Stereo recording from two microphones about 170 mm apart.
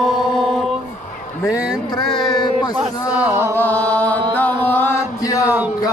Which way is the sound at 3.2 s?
15° right (ahead or behind).